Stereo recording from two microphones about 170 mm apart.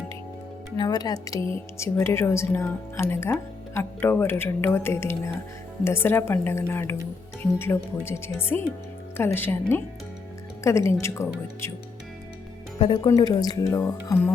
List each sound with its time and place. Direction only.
0.8 s speech: 25° left (ahead or behind)
8.0 s speech: 15° left (ahead or behind)
12.8 s speech: 30° left (ahead or behind)